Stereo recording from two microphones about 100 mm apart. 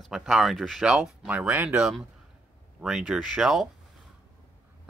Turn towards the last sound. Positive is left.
turn(degrees=-5)  # may be behind; listen again after turning